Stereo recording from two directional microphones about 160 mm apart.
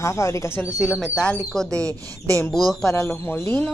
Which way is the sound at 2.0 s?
20° right (ahead or behind).